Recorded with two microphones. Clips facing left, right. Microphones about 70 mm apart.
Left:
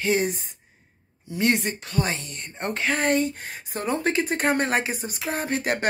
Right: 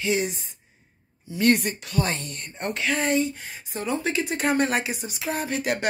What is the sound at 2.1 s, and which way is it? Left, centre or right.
Speech, centre.